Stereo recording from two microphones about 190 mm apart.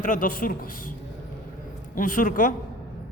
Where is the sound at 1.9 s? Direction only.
45° left (ahead or behind).